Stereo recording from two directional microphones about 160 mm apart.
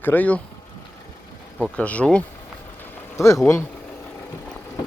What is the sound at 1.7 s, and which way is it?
Speech, 10° left (ahead or behind).